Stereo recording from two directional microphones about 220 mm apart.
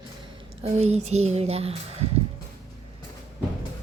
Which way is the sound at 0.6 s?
30° right (ahead or behind).